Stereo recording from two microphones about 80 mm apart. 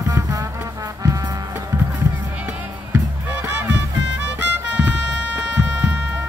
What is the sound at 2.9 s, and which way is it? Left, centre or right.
Music, right.